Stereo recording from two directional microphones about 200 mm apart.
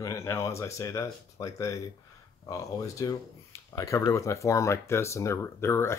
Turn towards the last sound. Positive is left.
turn(degrees=10)  # may be behind; listen again after turning